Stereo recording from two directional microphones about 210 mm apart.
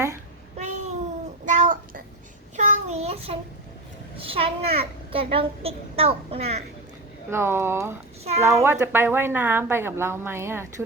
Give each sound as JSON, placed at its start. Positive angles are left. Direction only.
{"t": 0.5, "sound": "a sound", "side_deg": -35}
{"t": 2.6, "sound": "child singing", "side_deg": -30}
{"t": 4.2, "sound": "a child's voice", "side_deg": -25}
{"t": 7.3, "sound": "a woman's voice", "side_deg": -10}